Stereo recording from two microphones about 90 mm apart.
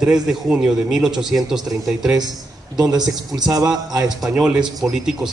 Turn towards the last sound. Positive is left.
turn(degrees=-5)  # may be behind; listen again after turning